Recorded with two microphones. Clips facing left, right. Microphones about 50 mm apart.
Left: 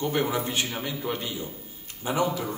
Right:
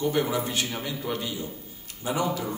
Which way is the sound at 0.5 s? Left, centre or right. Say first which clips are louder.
Even; centre.